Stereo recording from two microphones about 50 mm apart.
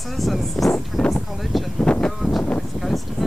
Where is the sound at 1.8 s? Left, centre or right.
Centre.